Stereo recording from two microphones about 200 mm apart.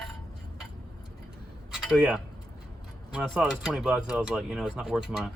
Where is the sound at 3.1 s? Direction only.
Centre (ahead or behind).